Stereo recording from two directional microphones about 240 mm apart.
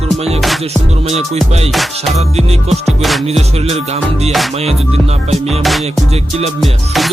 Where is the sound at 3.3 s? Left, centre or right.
Right.